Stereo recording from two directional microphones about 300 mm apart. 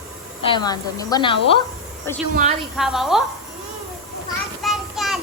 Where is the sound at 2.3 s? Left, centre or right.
Right.